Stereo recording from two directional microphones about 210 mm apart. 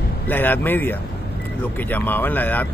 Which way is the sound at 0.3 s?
10° left (ahead or behind).